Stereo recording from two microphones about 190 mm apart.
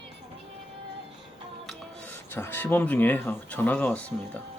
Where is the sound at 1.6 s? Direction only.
5° left (ahead or behind).